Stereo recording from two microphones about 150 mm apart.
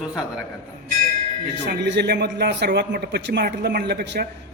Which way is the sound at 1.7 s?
90° right.